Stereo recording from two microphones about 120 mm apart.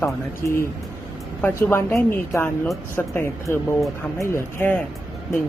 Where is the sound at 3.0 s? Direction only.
20° left (ahead or behind).